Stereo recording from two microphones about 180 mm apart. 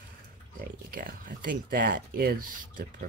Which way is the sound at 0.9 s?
50° right (ahead or behind).